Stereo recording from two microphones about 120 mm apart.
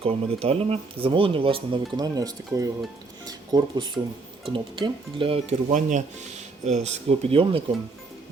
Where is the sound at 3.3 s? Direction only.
35° right (ahead or behind).